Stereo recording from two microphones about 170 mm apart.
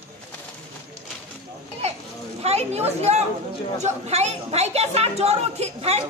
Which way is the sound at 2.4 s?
40° right (ahead or behind).